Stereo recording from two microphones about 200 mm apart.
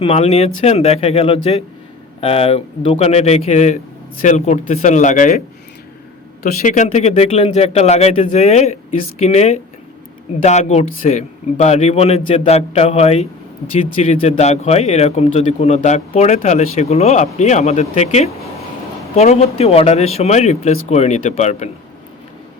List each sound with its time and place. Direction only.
0.0 s speech: 30° left (ahead or behind)
6.4 s speech: 45° left (ahead or behind)